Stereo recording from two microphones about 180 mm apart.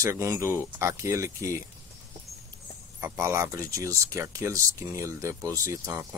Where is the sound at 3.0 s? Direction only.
15° right (ahead or behind).